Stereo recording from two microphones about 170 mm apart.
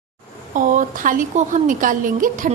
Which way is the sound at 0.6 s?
50° right (ahead or behind).